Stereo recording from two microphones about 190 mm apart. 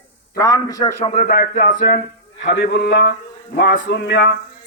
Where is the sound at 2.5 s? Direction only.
60° left (ahead or behind).